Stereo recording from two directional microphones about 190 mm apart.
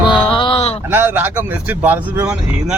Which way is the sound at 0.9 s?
10° right (ahead or behind).